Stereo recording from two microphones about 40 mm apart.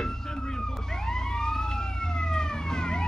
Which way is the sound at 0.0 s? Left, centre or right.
Centre.